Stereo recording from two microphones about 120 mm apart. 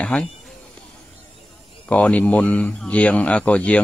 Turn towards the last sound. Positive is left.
turn(degrees=10)  # may be behind; listen again after turning